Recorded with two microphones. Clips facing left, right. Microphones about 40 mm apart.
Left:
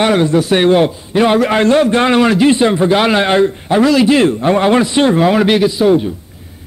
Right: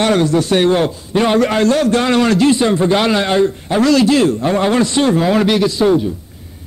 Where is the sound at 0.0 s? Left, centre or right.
Centre.